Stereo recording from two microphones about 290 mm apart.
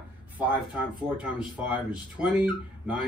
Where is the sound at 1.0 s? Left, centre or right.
Centre.